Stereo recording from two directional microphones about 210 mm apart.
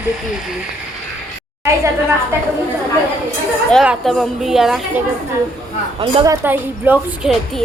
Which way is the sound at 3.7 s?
Centre (ahead or behind).